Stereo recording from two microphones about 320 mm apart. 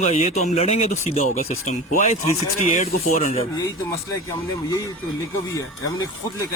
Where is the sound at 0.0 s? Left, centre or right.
Left.